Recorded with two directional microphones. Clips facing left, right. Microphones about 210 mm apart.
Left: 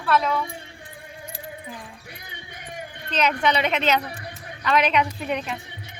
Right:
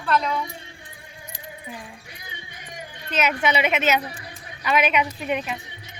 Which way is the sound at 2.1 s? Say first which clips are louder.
Left 1 dB; 55° left (ahead or behind).